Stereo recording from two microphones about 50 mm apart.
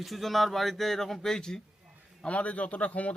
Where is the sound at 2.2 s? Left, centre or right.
Left.